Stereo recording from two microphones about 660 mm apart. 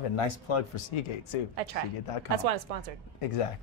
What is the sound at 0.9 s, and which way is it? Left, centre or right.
Speech, left.